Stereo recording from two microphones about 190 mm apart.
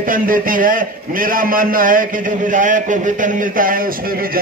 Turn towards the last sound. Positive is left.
turn(degrees=-50)  # may be behind; listen again after turning